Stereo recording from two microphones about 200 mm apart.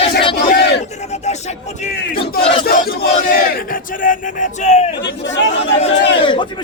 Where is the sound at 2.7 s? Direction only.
45° left (ahead or behind).